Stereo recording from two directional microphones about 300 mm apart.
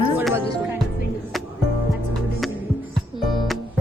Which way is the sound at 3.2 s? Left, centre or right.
Centre.